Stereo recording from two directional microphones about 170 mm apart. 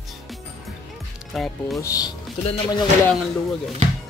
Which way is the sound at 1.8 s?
20° left (ahead or behind).